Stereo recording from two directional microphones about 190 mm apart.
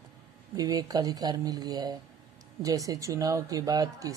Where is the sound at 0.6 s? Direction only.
20° right (ahead or behind).